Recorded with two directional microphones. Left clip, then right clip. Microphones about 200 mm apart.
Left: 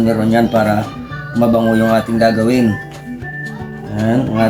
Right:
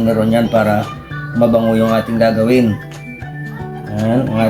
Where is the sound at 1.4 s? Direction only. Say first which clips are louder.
Right 1 dB; 20° right (ahead or behind).